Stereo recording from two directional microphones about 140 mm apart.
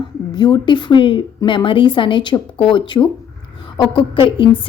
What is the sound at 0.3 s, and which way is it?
A woman's voice, 30° left (ahead or behind).